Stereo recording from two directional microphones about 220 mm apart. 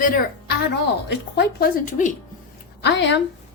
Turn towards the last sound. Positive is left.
turn(degrees=50)  # may be behind; listen again after turning